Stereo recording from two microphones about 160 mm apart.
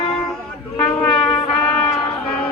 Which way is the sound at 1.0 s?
10° left (ahead or behind).